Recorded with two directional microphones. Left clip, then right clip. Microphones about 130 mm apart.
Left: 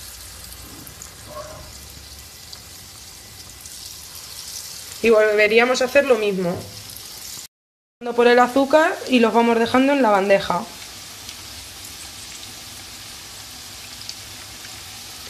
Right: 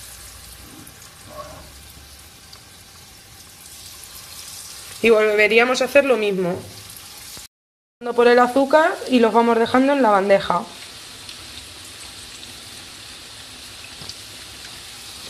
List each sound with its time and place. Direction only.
5.0 s speech: 20° right (ahead or behind)
8.0 s speech: 5° right (ahead or behind)